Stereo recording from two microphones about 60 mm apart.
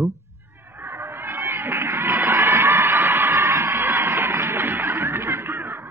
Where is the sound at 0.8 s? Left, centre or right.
Right.